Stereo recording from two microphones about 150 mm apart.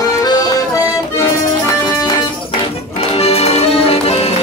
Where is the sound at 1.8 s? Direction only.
25° left (ahead or behind).